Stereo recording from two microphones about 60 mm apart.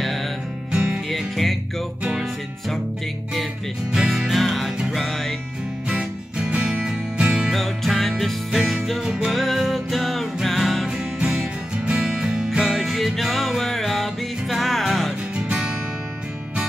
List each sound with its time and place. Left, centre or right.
1.1 s music: centre
3.9 s music: centre
5.9 s music: centre
7.5 s music: centre
11.1 s music: centre
12.6 s music: centre
15.3 s music: centre